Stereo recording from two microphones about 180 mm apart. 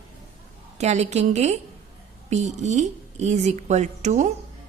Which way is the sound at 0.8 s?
40° right (ahead or behind).